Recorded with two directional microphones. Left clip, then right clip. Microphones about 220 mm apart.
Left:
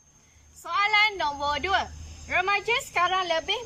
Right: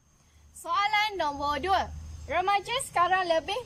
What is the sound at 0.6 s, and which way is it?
A woman's voice, 30° right (ahead or behind).